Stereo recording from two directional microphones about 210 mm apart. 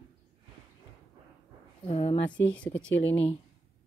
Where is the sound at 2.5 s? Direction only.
5° left (ahead or behind).